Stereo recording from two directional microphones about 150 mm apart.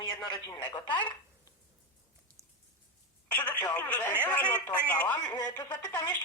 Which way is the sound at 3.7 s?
10° left (ahead or behind).